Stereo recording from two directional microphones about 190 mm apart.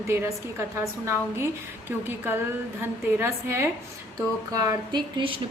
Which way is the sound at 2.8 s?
15° right (ahead or behind).